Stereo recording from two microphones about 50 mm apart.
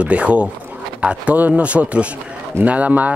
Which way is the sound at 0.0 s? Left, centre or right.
Right.